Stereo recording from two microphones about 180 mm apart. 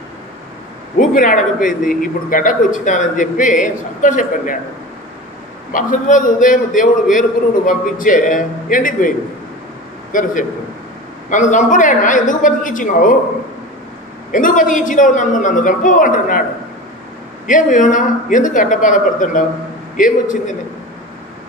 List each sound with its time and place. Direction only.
0.9 s a man's voice: 50° left (ahead or behind)
5.7 s a man's voice: 50° left (ahead or behind)
10.1 s a man's voice: 45° left (ahead or behind)
14.3 s a man's voice: 45° left (ahead or behind)
17.5 s a man's voice: 45° left (ahead or behind)